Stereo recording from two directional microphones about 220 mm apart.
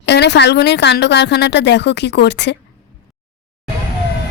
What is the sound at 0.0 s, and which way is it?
A woman's voice, 50° left (ahead or behind).